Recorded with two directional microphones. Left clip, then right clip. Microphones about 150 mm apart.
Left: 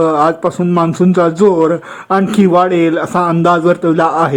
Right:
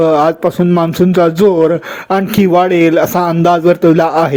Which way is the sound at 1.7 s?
20° right (ahead or behind).